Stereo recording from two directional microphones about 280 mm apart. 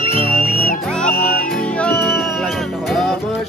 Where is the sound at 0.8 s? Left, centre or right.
Centre.